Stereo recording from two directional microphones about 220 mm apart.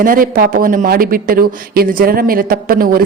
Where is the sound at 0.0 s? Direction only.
40° right (ahead or behind).